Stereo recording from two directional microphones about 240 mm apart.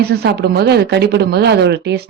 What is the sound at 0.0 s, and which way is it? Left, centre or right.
A woman's voice, right.